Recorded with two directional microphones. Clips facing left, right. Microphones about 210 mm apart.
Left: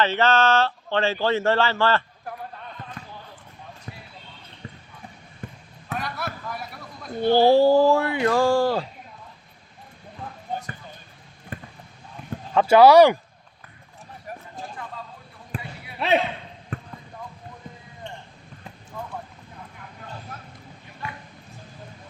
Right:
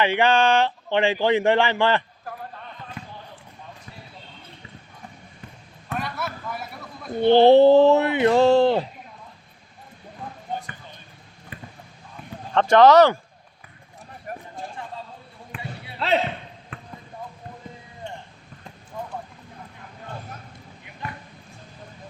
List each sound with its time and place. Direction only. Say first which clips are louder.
0.0 s speech: right 1 dB; 15° right (ahead or behind)
5.9 s a sound: right 1 dB; centre (ahead or behind)
7.2 s speech: right 3 dB; 20° right (ahead or behind)
11.5 s basketball bounce: left 3 dB; 45° left (ahead or behind)
12.5 s speech: left 1 dB; 10° left (ahead or behind)
14.3 s run: right 3 dB; 55° right (ahead or behind)
15.5 s basketball bounce: left 3 dB; 35° left (ahead or behind)
16.7 s basketball bounce: left 8 dB; 40° left (ahead or behind)